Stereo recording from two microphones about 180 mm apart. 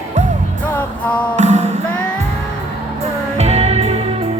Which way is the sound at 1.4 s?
40° right (ahead or behind).